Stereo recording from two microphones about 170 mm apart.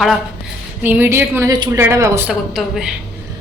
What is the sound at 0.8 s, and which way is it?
Speech, 10° right (ahead or behind).